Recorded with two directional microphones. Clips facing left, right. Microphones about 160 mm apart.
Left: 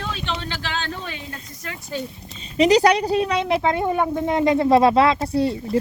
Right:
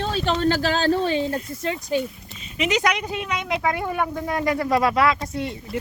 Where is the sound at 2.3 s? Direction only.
35° left (ahead or behind).